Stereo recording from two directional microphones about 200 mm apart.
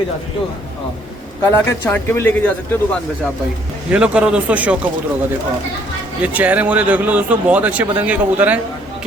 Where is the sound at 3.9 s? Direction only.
5° right (ahead or behind).